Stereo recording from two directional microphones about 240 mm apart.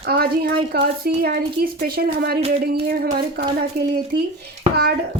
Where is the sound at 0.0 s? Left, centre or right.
Right.